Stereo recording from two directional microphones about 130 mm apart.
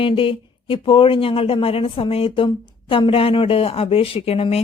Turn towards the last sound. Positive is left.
turn(degrees=50)  # may be behind; listen again after turning